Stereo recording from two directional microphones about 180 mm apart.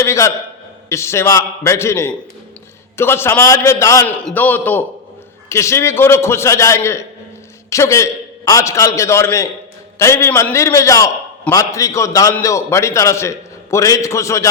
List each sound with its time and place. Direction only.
0.0 s a man's voice: 15° left (ahead or behind)